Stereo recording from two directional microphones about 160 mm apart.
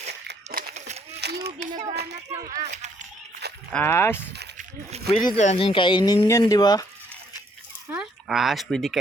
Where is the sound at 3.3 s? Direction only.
90° right.